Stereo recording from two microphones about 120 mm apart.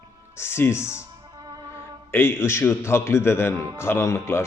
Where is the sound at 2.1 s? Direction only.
20° left (ahead or behind).